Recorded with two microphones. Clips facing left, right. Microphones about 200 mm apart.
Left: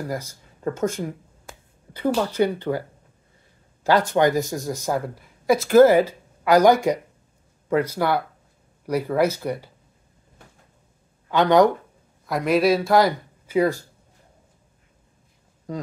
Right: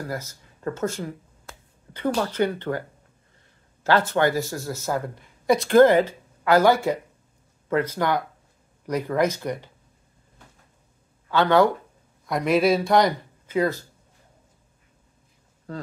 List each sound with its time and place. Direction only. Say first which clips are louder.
0.1 s speech: left 2 dB; 10° left (ahead or behind)
11.2 s speech: left 2 dB; 15° left (ahead or behind)
12.3 s speech: left 1 dB; centre (ahead or behind)